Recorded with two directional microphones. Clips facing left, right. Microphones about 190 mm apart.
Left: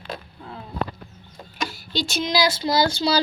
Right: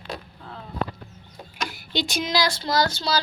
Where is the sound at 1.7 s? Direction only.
15° right (ahead or behind).